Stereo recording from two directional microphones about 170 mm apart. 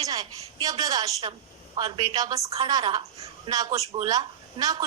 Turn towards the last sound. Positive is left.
turn(degrees=-20)  # may be behind; listen again after turning